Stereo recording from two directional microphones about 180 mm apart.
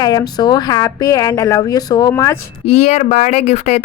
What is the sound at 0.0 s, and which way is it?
A woman's voice, 20° left (ahead or behind).